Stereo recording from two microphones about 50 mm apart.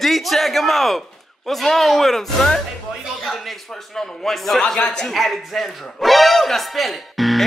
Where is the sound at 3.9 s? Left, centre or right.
Centre.